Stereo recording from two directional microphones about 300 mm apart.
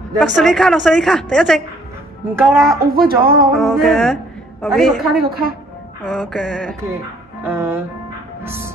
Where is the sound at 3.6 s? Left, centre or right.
Centre.